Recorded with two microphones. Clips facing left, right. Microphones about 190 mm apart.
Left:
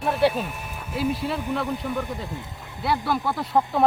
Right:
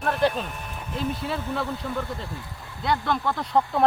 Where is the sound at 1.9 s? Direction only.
15° left (ahead or behind).